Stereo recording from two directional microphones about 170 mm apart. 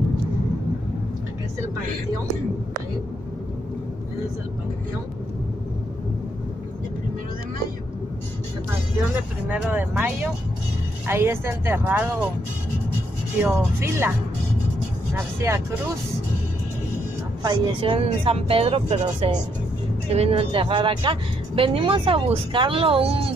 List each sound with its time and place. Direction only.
9.5 s speech: 10° right (ahead or behind)
13.4 s speech: 15° right (ahead or behind)
17.4 s speech: 25° right (ahead or behind)